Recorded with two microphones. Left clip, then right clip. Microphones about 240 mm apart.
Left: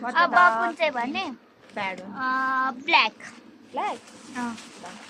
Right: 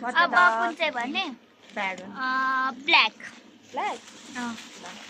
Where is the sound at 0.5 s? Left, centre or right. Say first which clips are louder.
Left 1 dB; right.